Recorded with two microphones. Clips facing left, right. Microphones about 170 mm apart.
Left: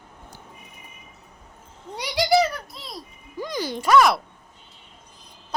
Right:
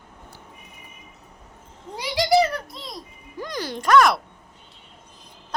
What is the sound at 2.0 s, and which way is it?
Music, centre (ahead or behind).